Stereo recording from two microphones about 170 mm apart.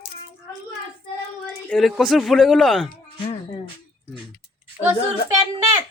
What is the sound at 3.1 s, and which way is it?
Music, 30° left (ahead or behind).